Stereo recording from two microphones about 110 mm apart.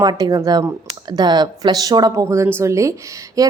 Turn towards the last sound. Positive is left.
turn(degrees=-30)  # may be behind; listen again after turning